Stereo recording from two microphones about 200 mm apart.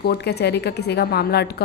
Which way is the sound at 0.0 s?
55° left (ahead or behind).